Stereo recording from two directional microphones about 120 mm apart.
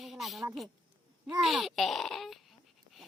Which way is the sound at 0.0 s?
Centre (ahead or behind).